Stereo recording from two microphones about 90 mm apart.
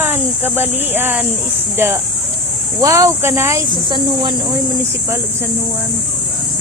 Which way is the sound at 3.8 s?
55° right (ahead or behind).